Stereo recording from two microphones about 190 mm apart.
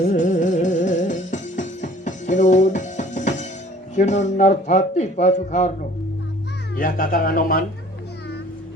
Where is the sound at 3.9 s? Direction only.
40° left (ahead or behind).